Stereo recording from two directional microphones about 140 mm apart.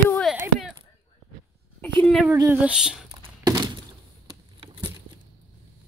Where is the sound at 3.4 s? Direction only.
30° right (ahead or behind).